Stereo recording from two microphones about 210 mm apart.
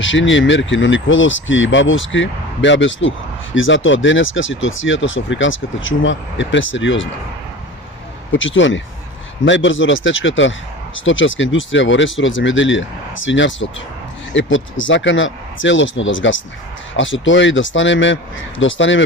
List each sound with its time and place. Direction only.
0.0 s speech: 65° left (ahead or behind)
8.3 s speech: 65° left (ahead or behind)